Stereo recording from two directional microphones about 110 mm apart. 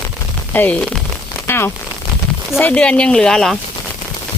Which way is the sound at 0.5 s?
15° left (ahead or behind).